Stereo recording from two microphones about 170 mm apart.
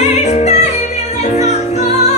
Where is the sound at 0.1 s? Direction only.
40° left (ahead or behind).